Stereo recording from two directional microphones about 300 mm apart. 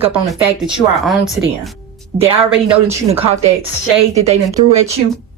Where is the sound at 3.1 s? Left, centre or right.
Centre.